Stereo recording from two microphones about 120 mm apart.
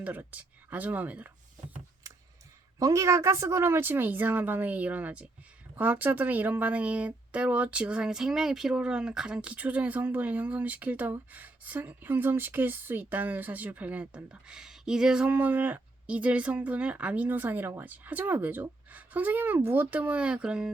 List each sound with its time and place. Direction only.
0.0 s speech: 15° right (ahead or behind)
2.7 s speech: 25° right (ahead or behind); by 20.7 s 5° right (ahead or behind)